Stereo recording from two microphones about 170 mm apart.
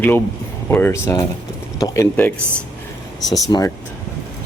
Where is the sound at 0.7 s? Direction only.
15° left (ahead or behind).